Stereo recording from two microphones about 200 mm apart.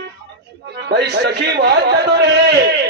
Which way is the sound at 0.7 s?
55° right (ahead or behind).